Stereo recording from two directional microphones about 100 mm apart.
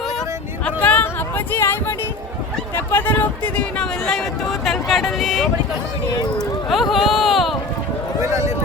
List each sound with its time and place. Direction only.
0.6 s a sound: 15° left (ahead or behind)
1.5 s speech: 20° left (ahead or behind); by 5.5 s centre (ahead or behind)
6.7 s speech: centre (ahead or behind)
8.2 s speech: 30° right (ahead or behind)